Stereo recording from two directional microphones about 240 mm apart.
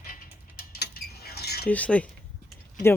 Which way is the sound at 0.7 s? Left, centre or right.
Left.